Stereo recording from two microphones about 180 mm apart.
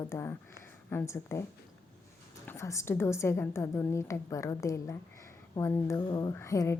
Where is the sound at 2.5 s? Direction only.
15° left (ahead or behind).